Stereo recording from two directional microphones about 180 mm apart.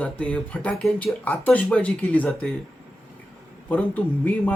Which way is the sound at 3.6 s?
10° left (ahead or behind).